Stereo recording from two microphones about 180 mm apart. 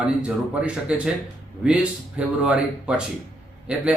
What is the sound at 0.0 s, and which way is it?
A man's voice, 5° right (ahead or behind).